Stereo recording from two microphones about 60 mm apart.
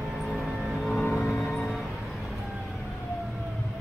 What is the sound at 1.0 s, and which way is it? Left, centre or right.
Music, centre.